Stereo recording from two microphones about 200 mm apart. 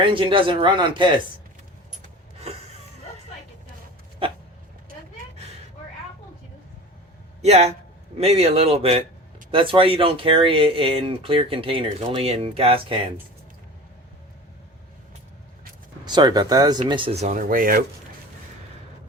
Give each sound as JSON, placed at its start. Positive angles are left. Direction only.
{"t": 0.0, "sound": "speech", "side_deg": -25}
{"t": 2.4, "sound": "a sound", "side_deg": -30}
{"t": 7.4, "sound": "speech", "side_deg": -30}
{"t": 16.0, "sound": "speech", "side_deg": -20}